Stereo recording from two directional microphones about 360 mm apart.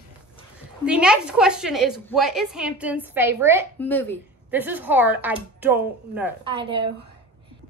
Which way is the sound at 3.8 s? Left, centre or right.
Centre.